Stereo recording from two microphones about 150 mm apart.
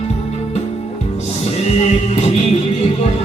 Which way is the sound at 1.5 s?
45° left (ahead or behind).